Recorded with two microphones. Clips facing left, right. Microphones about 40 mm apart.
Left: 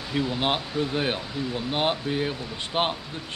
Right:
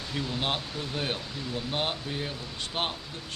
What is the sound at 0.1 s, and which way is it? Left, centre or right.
Speech, centre.